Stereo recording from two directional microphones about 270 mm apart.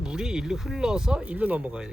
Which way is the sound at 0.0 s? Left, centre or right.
Centre.